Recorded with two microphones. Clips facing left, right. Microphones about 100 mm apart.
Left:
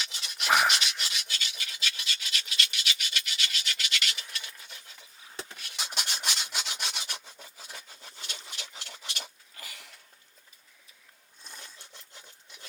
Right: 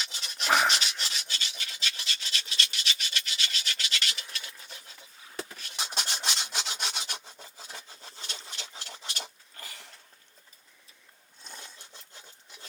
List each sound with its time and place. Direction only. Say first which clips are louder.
0.0 s rub: right 1 dB; 30° right (ahead or behind)
0.4 s rub: even; 5° left (ahead or behind)
0.7 s rub: even; 30° right (ahead or behind)